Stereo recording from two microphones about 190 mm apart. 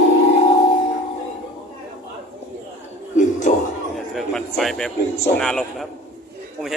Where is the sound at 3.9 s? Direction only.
Centre (ahead or behind).